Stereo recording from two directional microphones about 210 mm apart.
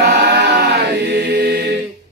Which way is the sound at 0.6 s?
50° right (ahead or behind).